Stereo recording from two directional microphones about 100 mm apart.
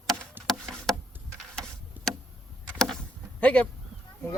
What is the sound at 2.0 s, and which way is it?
Tick, 15° right (ahead or behind).